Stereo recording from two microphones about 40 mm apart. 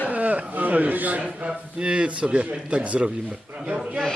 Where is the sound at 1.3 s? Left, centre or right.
Right.